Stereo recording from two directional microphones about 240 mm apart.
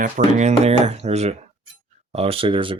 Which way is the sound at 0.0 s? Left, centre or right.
Right.